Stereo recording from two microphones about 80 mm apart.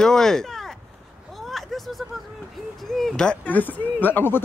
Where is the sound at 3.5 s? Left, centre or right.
Left.